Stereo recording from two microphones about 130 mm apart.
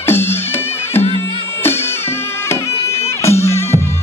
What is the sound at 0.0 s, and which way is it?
Music, 15° left (ahead or behind).